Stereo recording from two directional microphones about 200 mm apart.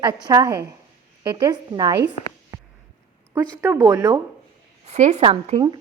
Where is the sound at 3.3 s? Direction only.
15° right (ahead or behind).